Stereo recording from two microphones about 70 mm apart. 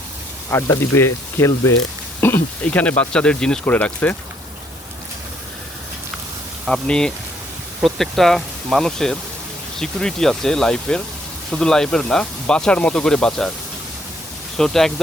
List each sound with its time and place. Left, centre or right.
0.5 s speech: left
2.2 s speech: left
6.8 s speech: centre
14.5 s speech: centre